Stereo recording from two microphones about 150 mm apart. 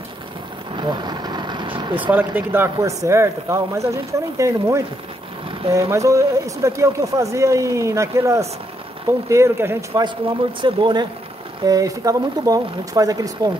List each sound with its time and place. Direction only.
0.7 s vehicle: 30° right (ahead or behind)
2.1 s speech: 15° right (ahead or behind)